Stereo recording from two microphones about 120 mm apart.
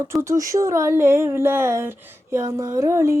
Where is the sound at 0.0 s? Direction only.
25° right (ahead or behind).